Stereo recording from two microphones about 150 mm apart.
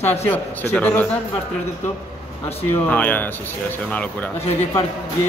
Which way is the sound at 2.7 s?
10° left (ahead or behind).